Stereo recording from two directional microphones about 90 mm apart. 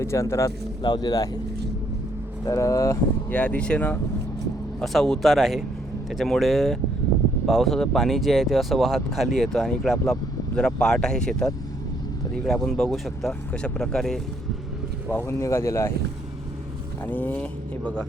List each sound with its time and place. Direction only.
0.0 s speech: 30° left (ahead or behind)
0.8 s speech: 50° left (ahead or behind)
2.4 s speech: 35° left (ahead or behind)
3.2 s speech: 15° left (ahead or behind)
4.8 s speech: 5° left (ahead or behind)
15.3 s speech: 30° left (ahead or behind)
17.1 s speech: 20° left (ahead or behind)